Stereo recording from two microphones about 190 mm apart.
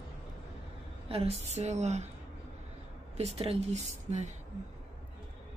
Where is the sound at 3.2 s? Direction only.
30° right (ahead or behind).